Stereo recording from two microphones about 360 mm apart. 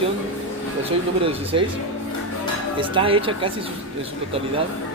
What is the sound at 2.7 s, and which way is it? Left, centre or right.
Speech, centre.